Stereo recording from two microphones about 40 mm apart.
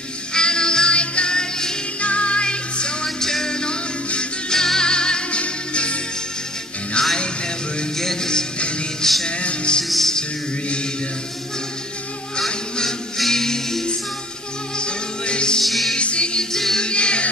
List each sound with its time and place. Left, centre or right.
0.3 s music: centre
2.0 s music: left
7.0 s music: left
9.4 s music: left
9.8 s music: centre
12.4 s music: centre
14.8 s music: left
15.6 s music: centre
16.0 s music: left
16.5 s music: centre
16.8 s music: left